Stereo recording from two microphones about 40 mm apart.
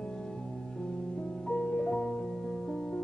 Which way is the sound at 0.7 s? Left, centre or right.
Left.